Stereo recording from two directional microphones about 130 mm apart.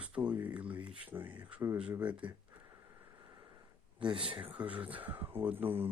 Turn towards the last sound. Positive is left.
turn(degrees=-15)  # may be behind; listen again after turning